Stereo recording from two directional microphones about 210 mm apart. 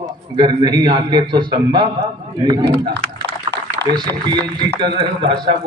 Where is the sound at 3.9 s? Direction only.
20° right (ahead or behind).